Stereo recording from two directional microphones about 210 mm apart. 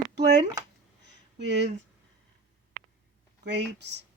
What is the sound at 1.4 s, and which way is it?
Speech, 55° right (ahead or behind).